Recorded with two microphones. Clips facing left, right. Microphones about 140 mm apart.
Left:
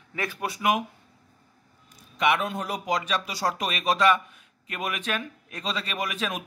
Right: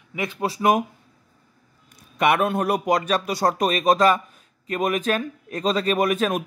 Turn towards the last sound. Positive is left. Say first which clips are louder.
# right 10 dB
turn(degrees=-50)  # may be behind; listen again after turning